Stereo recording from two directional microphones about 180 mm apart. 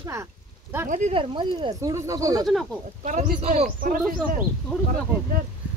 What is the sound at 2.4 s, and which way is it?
Speech, centre (ahead or behind).